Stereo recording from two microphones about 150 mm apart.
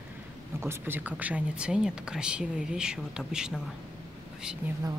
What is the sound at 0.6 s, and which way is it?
Speech, 15° right (ahead or behind).